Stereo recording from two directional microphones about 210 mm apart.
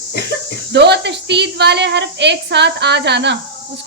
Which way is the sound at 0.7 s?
55° right (ahead or behind).